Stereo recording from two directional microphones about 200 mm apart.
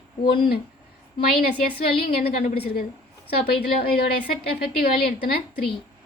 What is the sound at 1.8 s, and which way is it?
Speech, 50° left (ahead or behind).